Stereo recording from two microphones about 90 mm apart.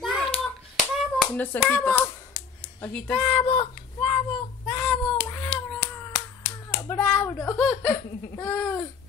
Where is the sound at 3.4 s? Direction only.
85° left.